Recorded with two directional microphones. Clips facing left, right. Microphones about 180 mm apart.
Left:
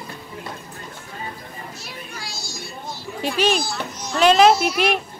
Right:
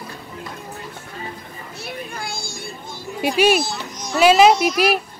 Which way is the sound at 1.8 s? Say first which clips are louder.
Right 6 dB; 55° right (ahead or behind).